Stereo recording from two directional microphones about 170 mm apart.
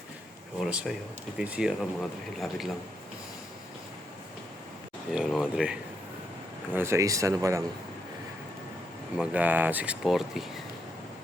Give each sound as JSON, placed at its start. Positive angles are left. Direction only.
{"t": 0.6, "sound": "speech", "side_deg": -5}
{"t": 5.1, "sound": "speech", "side_deg": -5}
{"t": 6.7, "sound": "speech", "side_deg": -15}
{"t": 9.1, "sound": "speech", "side_deg": -5}